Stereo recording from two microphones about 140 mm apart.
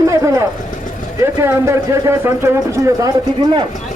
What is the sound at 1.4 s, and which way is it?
Speech, 20° right (ahead or behind).